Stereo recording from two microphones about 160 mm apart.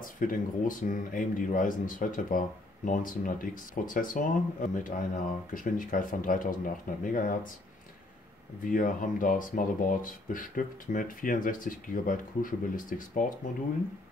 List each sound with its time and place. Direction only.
0.0 s speech: 60° left (ahead or behind)
8.6 s speech: 55° left (ahead or behind)